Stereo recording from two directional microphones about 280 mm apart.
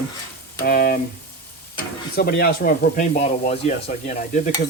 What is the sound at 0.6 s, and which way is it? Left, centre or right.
Frying, left.